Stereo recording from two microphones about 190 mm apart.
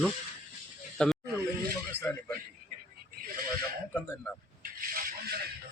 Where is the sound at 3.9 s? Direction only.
5° left (ahead or behind).